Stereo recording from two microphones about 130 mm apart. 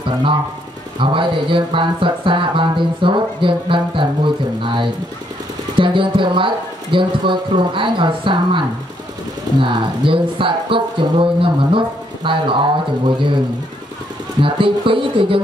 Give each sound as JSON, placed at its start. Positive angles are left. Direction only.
{"t": 0.9, "sound": "speech", "side_deg": -40}
{"t": 5.8, "sound": "speech", "side_deg": -40}
{"t": 14.4, "sound": "speech", "side_deg": -40}